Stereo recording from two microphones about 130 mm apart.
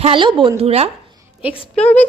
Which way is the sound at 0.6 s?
50° right (ahead or behind).